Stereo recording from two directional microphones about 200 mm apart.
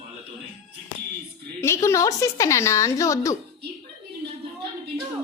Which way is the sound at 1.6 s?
15° left (ahead or behind).